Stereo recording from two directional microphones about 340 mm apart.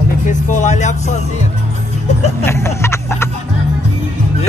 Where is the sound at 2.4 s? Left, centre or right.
Centre.